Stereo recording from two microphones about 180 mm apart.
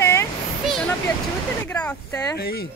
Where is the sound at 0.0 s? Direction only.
15° left (ahead or behind).